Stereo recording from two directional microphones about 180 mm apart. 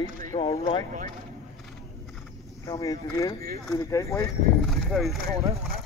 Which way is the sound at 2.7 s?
20° left (ahead or behind).